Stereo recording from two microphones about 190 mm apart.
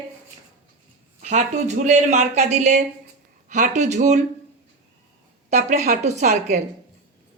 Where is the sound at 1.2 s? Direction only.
40° right (ahead or behind).